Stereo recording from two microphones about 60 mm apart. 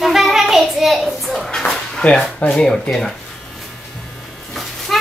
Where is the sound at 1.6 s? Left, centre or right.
Centre.